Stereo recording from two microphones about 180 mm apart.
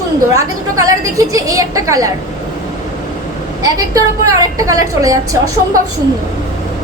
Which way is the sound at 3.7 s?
20° right (ahead or behind).